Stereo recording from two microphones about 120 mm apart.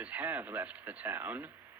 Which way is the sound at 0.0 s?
15° right (ahead or behind).